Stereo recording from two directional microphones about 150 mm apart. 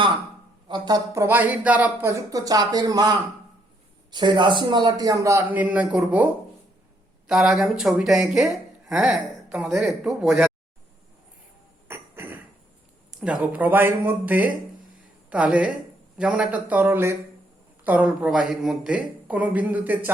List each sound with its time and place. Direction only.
0.7 s speech: 25° right (ahead or behind); by 10.5 s 5° right (ahead or behind)
11.9 s a sound: 15° right (ahead or behind)
13.1 s speech: 5° right (ahead or behind)